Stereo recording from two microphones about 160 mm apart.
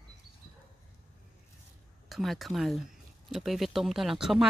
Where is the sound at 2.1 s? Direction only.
Centre (ahead or behind).